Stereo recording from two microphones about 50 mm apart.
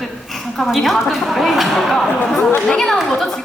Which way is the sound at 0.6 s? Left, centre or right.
Centre.